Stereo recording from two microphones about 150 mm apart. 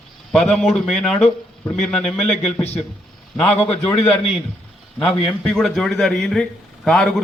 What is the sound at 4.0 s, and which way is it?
Speech, 45° left (ahead or behind).